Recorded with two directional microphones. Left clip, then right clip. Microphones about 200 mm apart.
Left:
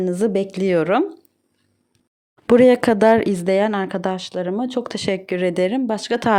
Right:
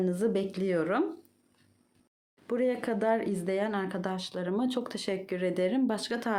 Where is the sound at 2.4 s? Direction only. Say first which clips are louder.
Left 17 dB; 50° left (ahead or behind).